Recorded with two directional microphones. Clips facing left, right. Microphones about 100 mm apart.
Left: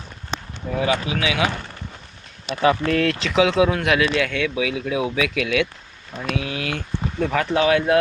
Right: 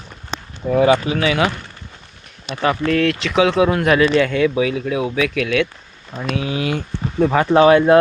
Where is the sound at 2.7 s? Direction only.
10° left (ahead or behind).